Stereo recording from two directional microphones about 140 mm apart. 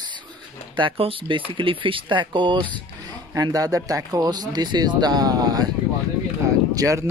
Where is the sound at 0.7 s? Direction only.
40° right (ahead or behind).